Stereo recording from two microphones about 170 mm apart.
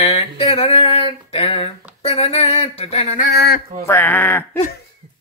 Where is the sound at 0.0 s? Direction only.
40° left (ahead or behind).